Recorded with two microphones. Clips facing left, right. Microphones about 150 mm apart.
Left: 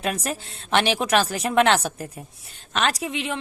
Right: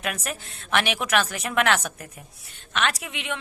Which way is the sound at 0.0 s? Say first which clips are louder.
Left 4 dB; 30° left (ahead or behind).